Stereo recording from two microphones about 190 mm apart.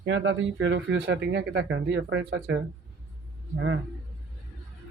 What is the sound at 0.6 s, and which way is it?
Speech, 70° right (ahead or behind).